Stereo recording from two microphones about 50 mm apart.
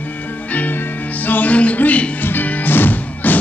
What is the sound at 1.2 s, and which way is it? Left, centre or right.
Music, left.